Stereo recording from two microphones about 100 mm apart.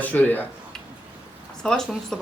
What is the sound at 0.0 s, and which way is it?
Speech, 15° left (ahead or behind).